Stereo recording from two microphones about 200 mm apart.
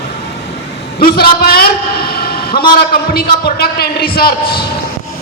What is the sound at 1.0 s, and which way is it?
A man's voice, 50° left (ahead or behind).